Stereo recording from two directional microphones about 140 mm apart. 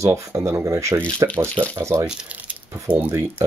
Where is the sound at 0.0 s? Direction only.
20° right (ahead or behind).